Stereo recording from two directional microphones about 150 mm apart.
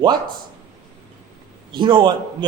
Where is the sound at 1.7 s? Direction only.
30° right (ahead or behind).